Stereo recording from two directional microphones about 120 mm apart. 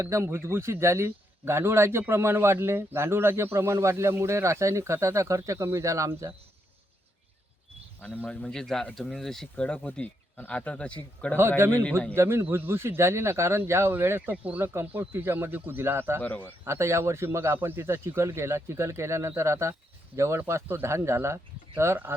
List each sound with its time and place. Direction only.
0.0 s a man's voice: 25° right (ahead or behind)
8.0 s speech: 10° left (ahead or behind)
11.3 s a man's voice: 20° right (ahead or behind)
16.2 s speech: 10° left (ahead or behind)
16.6 s a man's voice: 25° right (ahead or behind)